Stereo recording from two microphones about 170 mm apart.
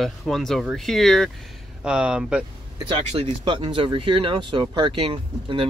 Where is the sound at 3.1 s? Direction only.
30° right (ahead or behind).